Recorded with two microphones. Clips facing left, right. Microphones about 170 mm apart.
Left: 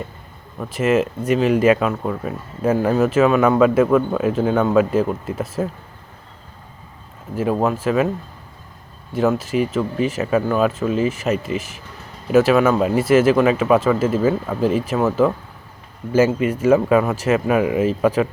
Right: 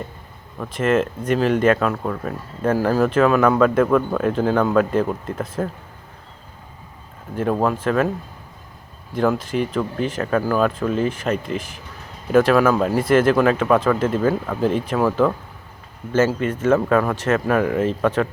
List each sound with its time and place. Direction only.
0.6 s speech: 5° left (ahead or behind)
7.3 s speech: 5° left (ahead or behind)
9.1 s speech: 5° left (ahead or behind)